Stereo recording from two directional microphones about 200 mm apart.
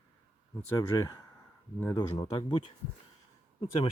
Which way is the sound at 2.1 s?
20° left (ahead or behind).